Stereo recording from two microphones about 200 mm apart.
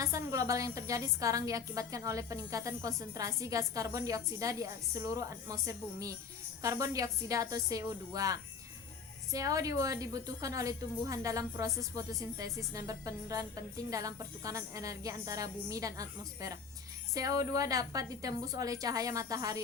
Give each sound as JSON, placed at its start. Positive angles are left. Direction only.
{"t": 0.0, "sound": "a woman's voice", "side_deg": -15}